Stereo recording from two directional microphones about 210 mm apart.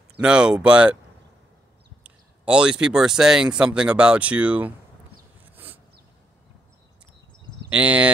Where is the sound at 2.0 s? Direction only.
5° right (ahead or behind).